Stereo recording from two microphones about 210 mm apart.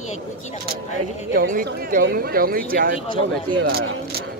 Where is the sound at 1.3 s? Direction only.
40° right (ahead or behind).